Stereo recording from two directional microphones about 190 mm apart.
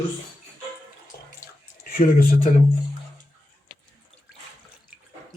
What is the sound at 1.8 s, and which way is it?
Speech, 50° left (ahead or behind).